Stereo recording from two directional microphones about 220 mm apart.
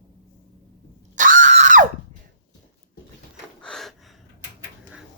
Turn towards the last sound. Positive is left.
turn(degrees=0)  # may be behind; listen again after turning